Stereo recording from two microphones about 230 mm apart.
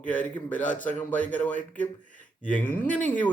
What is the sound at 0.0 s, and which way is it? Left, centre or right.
Speech, centre.